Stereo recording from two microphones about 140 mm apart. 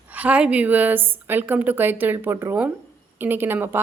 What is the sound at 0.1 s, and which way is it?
A woman's voice, 10° right (ahead or behind).